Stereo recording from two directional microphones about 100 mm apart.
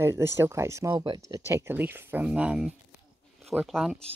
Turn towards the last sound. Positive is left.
turn(degrees=0)  # may be behind; listen again after turning